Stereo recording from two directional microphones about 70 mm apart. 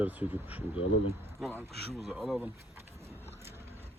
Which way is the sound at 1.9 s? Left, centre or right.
Centre.